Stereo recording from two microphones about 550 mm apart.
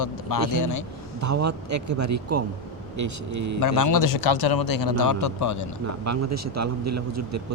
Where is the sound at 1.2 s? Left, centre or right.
Right.